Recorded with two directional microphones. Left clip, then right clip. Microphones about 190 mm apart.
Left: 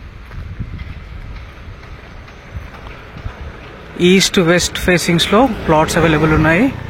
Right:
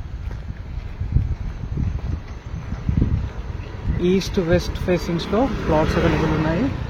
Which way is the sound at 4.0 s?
20° left (ahead or behind).